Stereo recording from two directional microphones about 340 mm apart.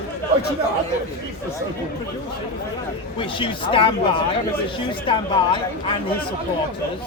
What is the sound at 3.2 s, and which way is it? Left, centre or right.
Speech, centre.